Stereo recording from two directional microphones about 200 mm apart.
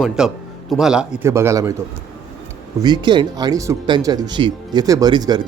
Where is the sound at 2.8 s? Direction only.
20° right (ahead or behind).